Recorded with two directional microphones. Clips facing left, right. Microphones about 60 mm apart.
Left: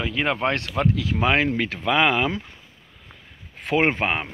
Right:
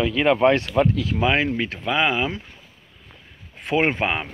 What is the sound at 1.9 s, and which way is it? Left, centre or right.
Speech, left.